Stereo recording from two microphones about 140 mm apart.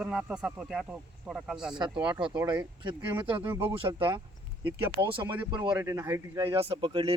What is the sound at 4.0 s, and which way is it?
Speech, 35° right (ahead or behind).